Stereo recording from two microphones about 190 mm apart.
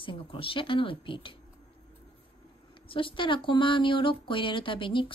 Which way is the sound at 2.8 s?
25° left (ahead or behind).